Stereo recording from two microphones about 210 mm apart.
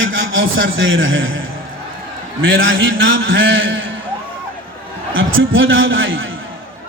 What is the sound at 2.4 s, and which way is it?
A man's voice, 65° right (ahead or behind).